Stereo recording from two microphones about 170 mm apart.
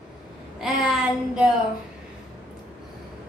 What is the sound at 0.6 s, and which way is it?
Speech, 5° right (ahead or behind).